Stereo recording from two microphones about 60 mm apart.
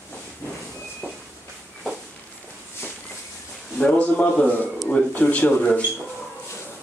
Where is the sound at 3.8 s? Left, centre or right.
Left.